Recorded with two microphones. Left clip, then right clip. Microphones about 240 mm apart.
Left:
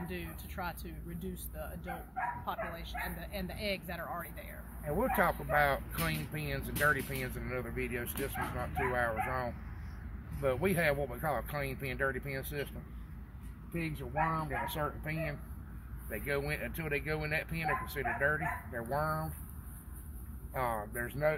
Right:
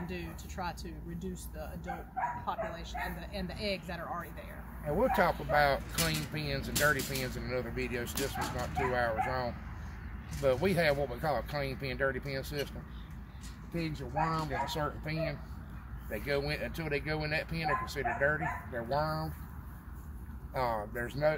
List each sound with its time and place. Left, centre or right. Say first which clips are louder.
0.1 s speech: right 1 dB; centre
4.8 s speech: right 2 dB; centre
13.7 s speech: right 1 dB; centre
20.5 s speech: right 2 dB; centre